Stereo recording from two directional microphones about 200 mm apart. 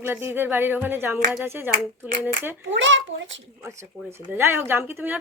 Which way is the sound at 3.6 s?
15° right (ahead or behind).